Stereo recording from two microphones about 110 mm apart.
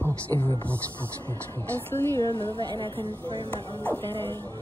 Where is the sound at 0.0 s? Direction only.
20° left (ahead or behind).